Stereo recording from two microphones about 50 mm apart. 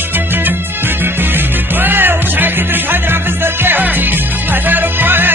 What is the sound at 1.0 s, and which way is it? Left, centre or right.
Music, right.